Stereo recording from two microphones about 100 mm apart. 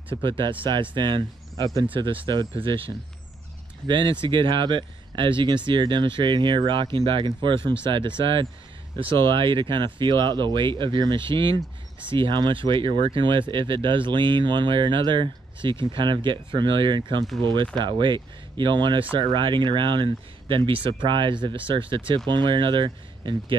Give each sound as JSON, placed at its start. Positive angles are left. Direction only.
{"t": 0.2, "sound": "speech", "side_deg": -55}